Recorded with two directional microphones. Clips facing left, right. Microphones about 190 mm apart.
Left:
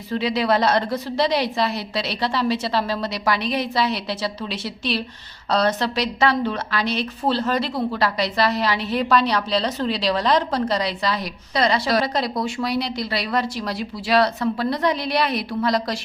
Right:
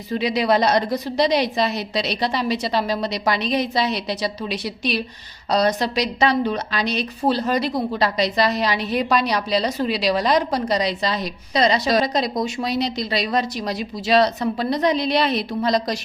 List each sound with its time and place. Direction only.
0.1 s a woman's voice: 15° right (ahead or behind)